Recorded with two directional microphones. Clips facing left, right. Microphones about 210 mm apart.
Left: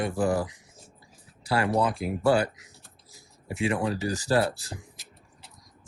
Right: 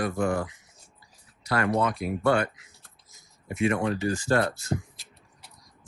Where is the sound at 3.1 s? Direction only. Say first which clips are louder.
Even; 30° left (ahead or behind).